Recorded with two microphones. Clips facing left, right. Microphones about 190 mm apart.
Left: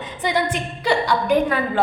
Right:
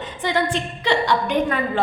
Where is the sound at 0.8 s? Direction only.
10° left (ahead or behind).